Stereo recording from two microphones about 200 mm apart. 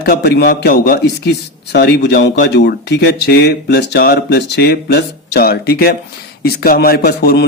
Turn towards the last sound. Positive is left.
turn(degrees=50)  # may be behind; listen again after turning